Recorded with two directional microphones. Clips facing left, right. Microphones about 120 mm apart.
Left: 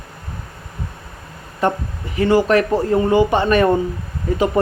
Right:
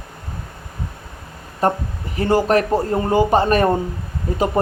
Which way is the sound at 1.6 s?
40° right (ahead or behind).